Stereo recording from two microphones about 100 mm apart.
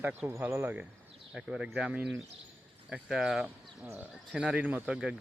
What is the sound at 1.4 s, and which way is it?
Speech, 10° right (ahead or behind).